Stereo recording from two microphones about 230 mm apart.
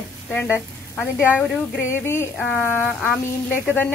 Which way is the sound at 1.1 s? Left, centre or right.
Centre.